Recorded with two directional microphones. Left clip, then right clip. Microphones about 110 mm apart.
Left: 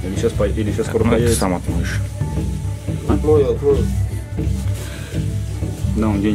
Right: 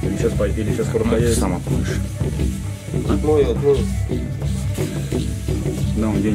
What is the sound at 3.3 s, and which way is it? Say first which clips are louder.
Speech: left 1 dB; 5° left (ahead or behind).